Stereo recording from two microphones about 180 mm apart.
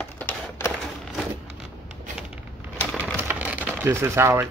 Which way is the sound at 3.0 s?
10° right (ahead or behind).